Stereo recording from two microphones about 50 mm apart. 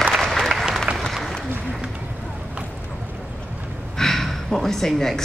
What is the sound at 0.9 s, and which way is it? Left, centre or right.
Applause, right.